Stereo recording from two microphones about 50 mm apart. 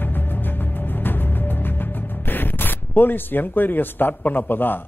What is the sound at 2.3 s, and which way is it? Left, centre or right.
Speech, left.